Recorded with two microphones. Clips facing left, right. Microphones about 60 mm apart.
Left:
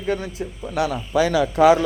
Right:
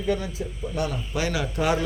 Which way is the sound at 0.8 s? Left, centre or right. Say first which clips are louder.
Left 6 dB; left.